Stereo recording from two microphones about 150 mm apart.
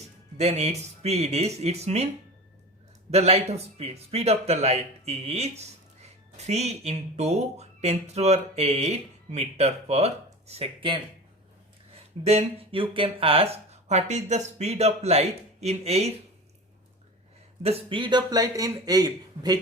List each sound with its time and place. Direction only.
0.3 s a man's voice: 45° right (ahead or behind)
3.1 s a man's voice: 45° right (ahead or behind)
12.2 s a man's voice: 45° right (ahead or behind)
17.6 s speech: 40° right (ahead or behind)